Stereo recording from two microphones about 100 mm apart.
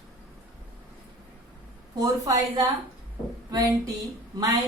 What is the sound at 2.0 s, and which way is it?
A woman's voice, 40° right (ahead or behind).